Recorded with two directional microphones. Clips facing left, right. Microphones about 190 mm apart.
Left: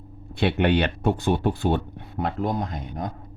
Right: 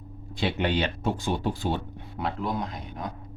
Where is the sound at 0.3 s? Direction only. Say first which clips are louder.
Left 5 dB; 60° left (ahead or behind).